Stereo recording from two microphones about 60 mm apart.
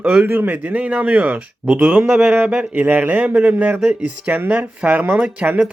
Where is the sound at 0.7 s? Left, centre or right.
Right.